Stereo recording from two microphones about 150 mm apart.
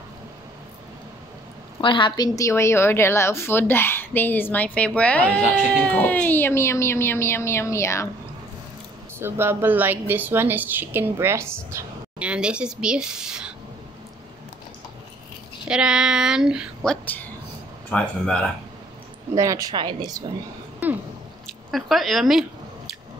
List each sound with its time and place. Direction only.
1.8 s a woman's voice: 35° left (ahead or behind)
9.2 s a woman's voice: 15° right (ahead or behind)
15.7 s a woman's voice: 5° right (ahead or behind)
19.3 s a woman's voice: 20° right (ahead or behind)
21.6 s a woman's voice: centre (ahead or behind)